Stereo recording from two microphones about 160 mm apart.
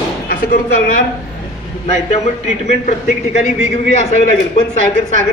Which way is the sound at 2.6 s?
50° left (ahead or behind).